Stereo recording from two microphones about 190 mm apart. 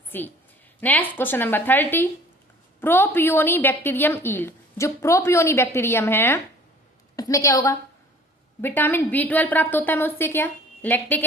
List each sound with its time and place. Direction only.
0.1 s a woman's voice: 10° left (ahead or behind)